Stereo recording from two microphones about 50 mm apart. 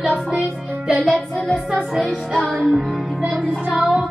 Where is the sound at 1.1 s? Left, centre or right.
Left.